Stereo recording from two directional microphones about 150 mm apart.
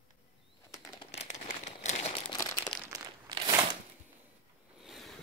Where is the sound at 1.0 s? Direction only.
50° left (ahead or behind).